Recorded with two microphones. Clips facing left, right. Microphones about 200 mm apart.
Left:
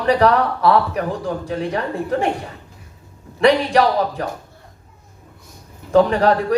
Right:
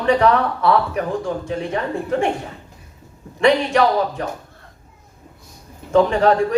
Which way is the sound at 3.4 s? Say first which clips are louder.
Left 1 dB; 35° left (ahead or behind).